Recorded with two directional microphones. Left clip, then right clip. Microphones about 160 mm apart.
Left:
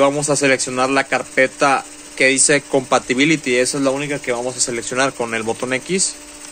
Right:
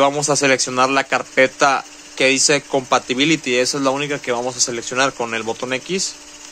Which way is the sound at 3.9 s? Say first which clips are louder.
Even; 35° right (ahead or behind).